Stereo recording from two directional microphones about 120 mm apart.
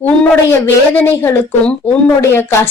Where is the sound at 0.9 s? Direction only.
15° left (ahead or behind).